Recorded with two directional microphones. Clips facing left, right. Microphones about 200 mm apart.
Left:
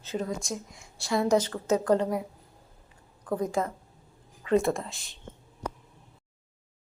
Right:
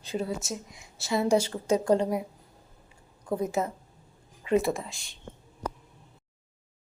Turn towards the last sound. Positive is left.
turn(degrees=0)  # may be behind; listen again after turning